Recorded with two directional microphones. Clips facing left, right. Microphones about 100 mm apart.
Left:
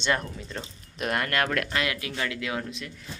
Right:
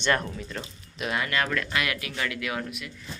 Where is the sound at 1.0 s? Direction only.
55° left (ahead or behind).